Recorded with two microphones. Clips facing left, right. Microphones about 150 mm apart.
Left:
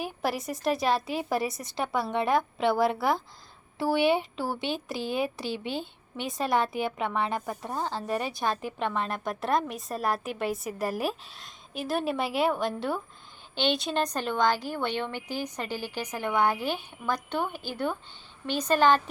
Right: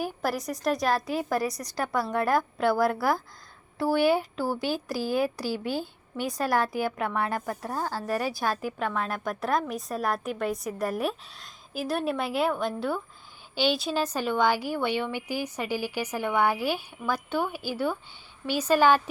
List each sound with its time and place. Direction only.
0.0 s a woman's voice: centre (ahead or behind)
1.4 s a woman's voice: 25° left (ahead or behind)
1.8 s a woman's voice: centre (ahead or behind)